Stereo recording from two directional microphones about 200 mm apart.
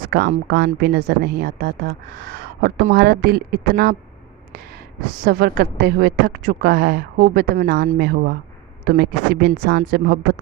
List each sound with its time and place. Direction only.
0.1 s a woman's voice: 55° right (ahead or behind)
5.2 s a woman's voice: 50° right (ahead or behind)